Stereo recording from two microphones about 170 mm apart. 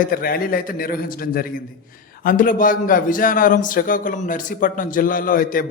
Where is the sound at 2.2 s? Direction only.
55° left (ahead or behind).